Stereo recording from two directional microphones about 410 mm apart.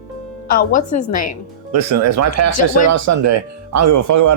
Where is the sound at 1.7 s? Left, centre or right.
Right.